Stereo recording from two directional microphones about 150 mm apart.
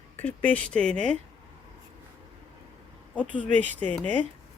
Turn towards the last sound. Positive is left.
turn(degrees=5)  # may be behind; listen again after turning